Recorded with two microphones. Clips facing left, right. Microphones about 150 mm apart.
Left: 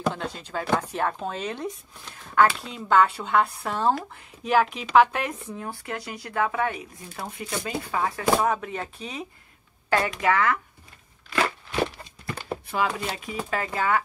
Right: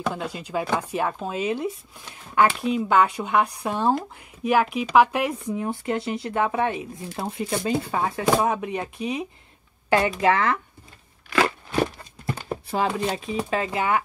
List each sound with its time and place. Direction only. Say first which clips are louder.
0.1 s speech: right 3 dB; 10° right (ahead or behind)
5.7 s speech: right 8 dB; 25° right (ahead or behind)
12.7 s speech: right 3 dB; 30° right (ahead or behind)